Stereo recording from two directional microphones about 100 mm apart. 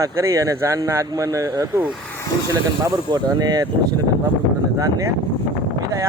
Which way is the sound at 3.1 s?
40° right (ahead or behind).